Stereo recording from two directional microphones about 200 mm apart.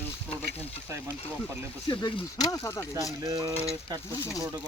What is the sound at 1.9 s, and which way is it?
Speech, 20° left (ahead or behind).